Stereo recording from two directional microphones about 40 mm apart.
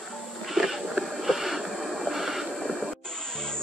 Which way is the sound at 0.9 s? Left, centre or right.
Centre.